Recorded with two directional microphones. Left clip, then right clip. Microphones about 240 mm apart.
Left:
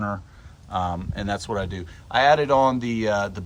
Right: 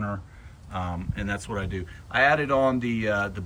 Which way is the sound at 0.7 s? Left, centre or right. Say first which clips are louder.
Left 7 dB; centre.